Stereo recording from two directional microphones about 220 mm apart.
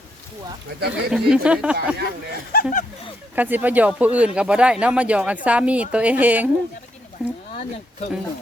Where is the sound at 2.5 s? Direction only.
40° left (ahead or behind).